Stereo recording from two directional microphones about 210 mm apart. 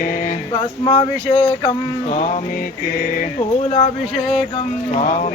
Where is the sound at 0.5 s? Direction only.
25° left (ahead or behind).